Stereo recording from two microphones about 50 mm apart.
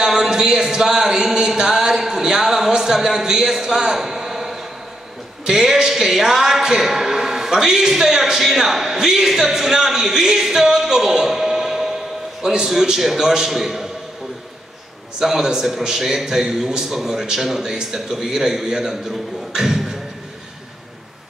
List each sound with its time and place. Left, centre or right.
0.0 s a sound: centre
5.4 s a man's voice: centre
15.1 s a man's voice: centre